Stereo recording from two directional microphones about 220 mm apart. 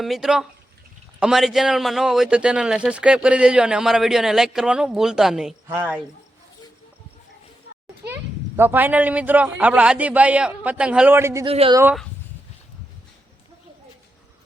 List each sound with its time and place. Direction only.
0.0 s a man's voice: centre (ahead or behind)
8.0 s speech: 10° right (ahead or behind)
11.4 s speech: 25° right (ahead or behind)